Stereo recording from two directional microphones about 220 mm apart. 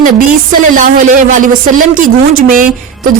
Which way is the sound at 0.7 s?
35° right (ahead or behind).